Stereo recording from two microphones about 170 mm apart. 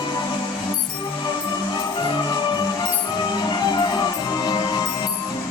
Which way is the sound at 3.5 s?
25° left (ahead or behind).